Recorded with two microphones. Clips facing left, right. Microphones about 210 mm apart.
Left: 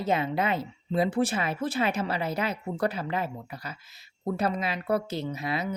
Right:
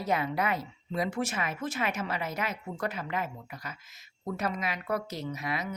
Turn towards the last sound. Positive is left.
turn(degrees=30)  # may be behind; listen again after turning